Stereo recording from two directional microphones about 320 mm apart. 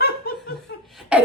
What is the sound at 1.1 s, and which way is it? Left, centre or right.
Speech, centre.